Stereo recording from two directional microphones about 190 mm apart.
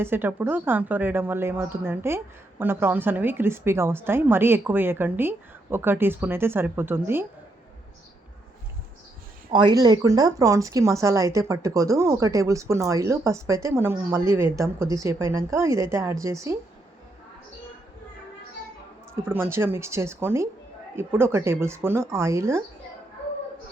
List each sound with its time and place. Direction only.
0.0 s speech: 10° right (ahead or behind)
9.5 s speech: 25° right (ahead or behind)
19.2 s speech: 10° right (ahead or behind)